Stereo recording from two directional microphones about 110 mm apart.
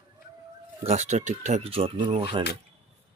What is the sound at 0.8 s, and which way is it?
Speech, 80° right.